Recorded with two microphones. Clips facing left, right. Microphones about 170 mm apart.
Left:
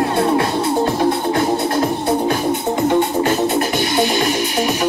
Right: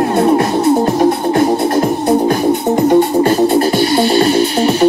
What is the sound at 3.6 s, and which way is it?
Music, 15° left (ahead or behind).